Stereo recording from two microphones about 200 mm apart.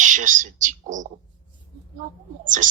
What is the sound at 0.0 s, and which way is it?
A woman's voice, 40° right (ahead or behind).